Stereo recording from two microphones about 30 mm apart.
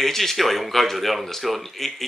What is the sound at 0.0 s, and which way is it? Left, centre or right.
Speech, centre.